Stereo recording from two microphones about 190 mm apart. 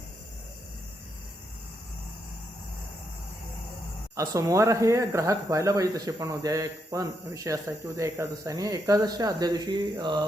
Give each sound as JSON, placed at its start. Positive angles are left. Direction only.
{"t": 4.2, "sound": "speech", "side_deg": -15}